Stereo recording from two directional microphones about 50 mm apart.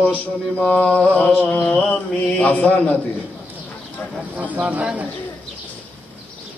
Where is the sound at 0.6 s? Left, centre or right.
Centre.